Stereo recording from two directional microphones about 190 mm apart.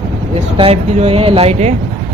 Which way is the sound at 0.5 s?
30° right (ahead or behind).